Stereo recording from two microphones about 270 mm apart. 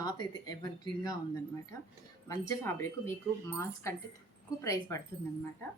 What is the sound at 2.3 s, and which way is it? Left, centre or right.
Speech, centre.